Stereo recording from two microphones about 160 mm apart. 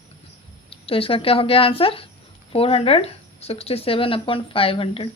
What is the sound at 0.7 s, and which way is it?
Speech, 35° left (ahead or behind).